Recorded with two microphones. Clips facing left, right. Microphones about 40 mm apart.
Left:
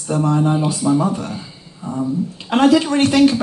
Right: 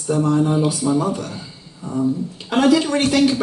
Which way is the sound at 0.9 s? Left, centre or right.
Left.